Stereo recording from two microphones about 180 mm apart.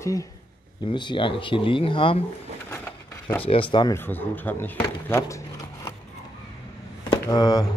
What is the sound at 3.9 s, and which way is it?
Speech, 10° left (ahead or behind).